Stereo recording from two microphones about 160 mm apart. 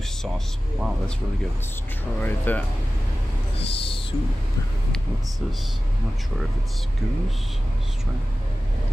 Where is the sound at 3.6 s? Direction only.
35° left (ahead or behind).